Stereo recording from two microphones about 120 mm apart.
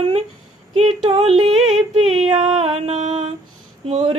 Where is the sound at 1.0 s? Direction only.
50° right (ahead or behind).